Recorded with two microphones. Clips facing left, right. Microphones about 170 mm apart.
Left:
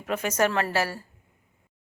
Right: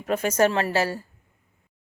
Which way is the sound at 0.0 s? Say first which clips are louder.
Right 4 dB; 35° right (ahead or behind).